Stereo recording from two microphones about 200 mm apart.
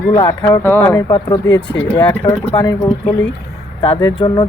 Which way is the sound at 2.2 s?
20° left (ahead or behind).